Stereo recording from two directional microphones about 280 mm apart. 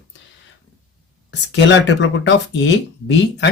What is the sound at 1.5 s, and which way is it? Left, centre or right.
Speech, left.